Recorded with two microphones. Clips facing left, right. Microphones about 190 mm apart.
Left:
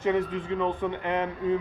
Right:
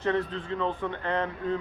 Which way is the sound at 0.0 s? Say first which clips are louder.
Left 2 dB; 10° left (ahead or behind).